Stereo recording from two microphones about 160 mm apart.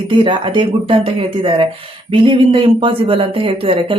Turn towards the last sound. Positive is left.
turn(degrees=-35)  # may be behind; listen again after turning